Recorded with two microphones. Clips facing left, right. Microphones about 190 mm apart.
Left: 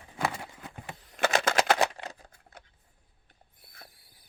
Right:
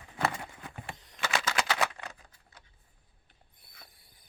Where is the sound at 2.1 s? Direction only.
40° left (ahead or behind).